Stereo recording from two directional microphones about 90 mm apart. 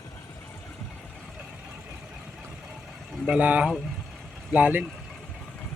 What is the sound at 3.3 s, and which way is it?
Speech, 15° right (ahead or behind).